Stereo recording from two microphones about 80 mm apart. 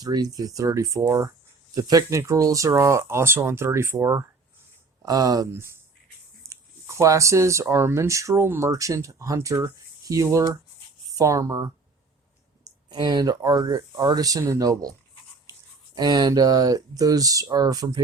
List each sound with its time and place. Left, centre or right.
0.0 s speech: right
5.0 s speech: right
5.5 s speech: right
12.6 s speech: right
16.0 s speech: right